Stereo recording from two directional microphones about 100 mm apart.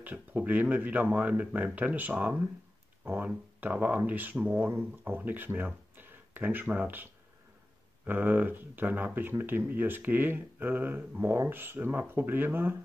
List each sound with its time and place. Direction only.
0.0 s speech: 15° right (ahead or behind)